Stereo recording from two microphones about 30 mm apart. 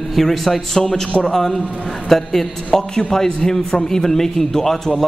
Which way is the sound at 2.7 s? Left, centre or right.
Left.